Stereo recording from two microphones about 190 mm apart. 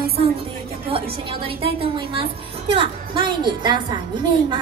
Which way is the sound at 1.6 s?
30° right (ahead or behind).